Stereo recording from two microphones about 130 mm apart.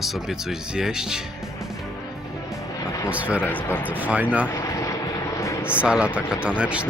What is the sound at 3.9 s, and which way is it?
Speech, 10° right (ahead or behind).